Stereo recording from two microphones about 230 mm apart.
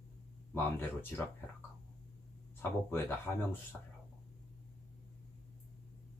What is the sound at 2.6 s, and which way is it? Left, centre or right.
Speech, centre.